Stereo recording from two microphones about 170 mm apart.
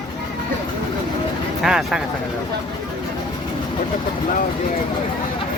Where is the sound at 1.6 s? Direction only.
Centre (ahead or behind).